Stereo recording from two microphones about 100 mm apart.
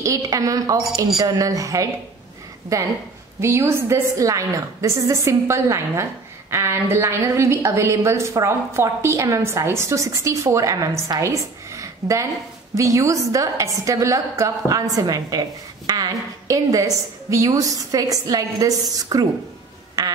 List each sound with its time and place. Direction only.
0.0 s a woman's voice: 35° right (ahead or behind)